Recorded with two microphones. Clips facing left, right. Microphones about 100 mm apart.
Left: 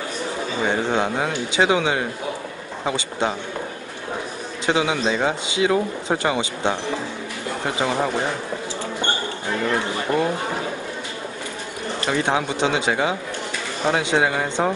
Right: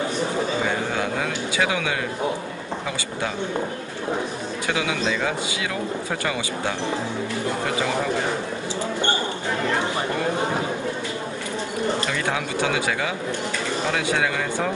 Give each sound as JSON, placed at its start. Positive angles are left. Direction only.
{"t": 0.7, "sound": "a sound", "side_deg": 25}
{"t": 4.6, "sound": "speech", "side_deg": 25}
{"t": 12.1, "sound": "speech", "side_deg": 25}